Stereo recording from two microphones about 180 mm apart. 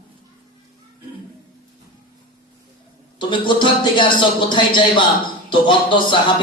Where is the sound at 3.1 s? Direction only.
25° left (ahead or behind).